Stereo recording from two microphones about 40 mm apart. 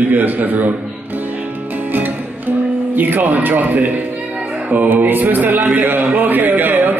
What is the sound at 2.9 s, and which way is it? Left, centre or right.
A man's voice, right.